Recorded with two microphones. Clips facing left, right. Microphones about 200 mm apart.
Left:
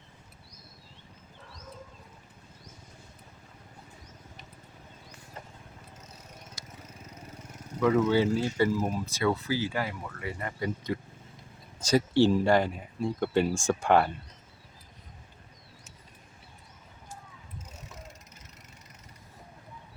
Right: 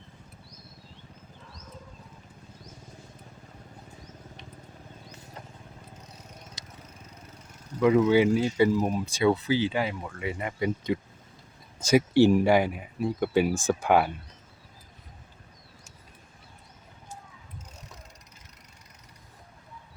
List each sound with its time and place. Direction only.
7.8 s speech: 10° right (ahead or behind)